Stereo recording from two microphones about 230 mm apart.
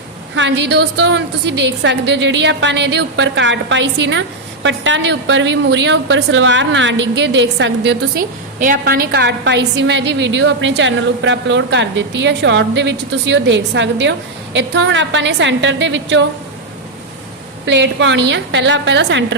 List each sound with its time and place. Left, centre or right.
0.3 s a woman's voice: right
8.5 s a woman's voice: right
17.7 s a woman's voice: right